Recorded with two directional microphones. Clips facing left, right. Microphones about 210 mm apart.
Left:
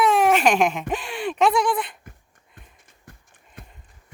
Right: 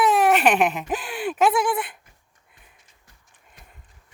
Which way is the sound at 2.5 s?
55° left (ahead or behind).